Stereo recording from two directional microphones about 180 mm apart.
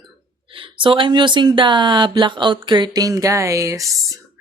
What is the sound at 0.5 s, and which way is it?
Speech, 30° right (ahead or behind).